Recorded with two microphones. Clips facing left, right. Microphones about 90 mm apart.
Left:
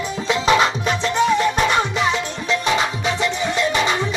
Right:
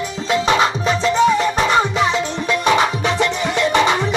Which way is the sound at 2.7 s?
65° right (ahead or behind).